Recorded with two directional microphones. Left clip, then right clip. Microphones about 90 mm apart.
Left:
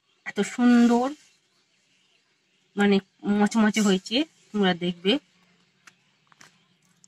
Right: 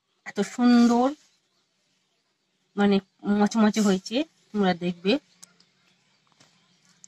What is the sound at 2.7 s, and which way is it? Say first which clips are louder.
Speech: left 1 dB; 20° right (ahead or behind).